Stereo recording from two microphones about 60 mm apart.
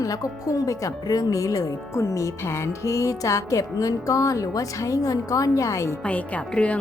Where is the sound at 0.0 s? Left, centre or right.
Left.